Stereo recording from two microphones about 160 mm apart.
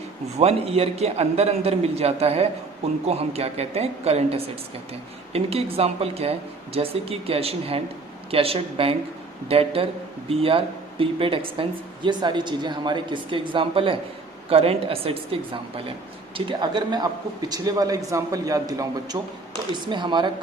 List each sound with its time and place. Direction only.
0.3 s a man's voice: 40° right (ahead or behind)